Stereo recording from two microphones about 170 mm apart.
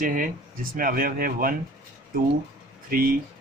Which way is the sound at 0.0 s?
50° right (ahead or behind).